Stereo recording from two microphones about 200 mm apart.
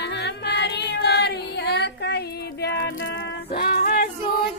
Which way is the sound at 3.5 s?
50° left (ahead or behind).